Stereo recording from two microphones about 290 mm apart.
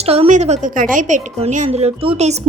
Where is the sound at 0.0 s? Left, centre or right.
Right.